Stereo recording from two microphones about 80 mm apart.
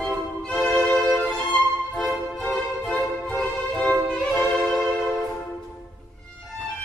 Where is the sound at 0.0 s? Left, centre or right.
Centre.